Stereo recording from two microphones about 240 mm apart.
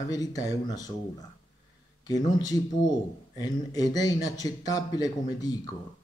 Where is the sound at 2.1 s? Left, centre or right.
Centre.